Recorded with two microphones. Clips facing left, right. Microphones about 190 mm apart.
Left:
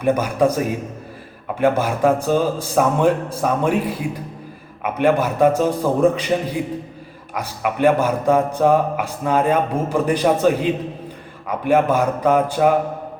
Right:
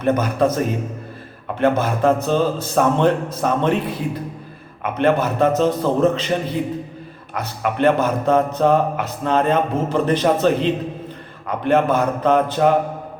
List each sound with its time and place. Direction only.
0.0 s a man's voice: 10° left (ahead or behind)